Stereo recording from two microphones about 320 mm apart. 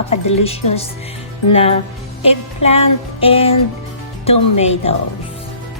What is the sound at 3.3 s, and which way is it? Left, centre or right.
Music, centre.